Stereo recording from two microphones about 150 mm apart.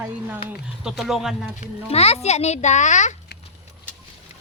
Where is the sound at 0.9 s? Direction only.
Centre (ahead or behind).